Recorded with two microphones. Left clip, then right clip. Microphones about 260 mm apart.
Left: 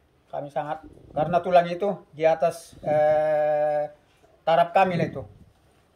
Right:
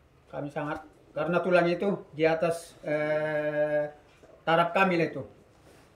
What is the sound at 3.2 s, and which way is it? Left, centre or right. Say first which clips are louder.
Mantra: left 7 dB; left.